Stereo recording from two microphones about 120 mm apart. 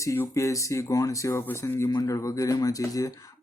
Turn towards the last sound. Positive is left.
turn(degrees=30)  # may be behind; listen again after turning